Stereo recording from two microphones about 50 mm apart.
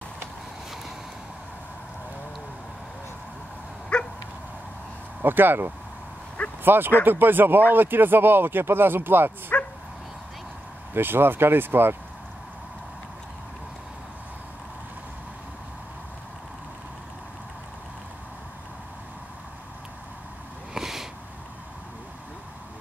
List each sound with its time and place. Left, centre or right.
3.9 s dog: centre
5.2 s speech: right
9.5 s bow-wow: left
10.9 s speech: right
20.7 s a sound: centre